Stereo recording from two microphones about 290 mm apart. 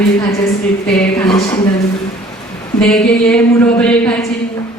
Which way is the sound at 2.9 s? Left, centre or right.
Centre.